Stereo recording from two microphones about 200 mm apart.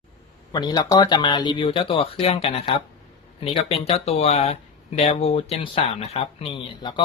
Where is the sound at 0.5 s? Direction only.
20° left (ahead or behind).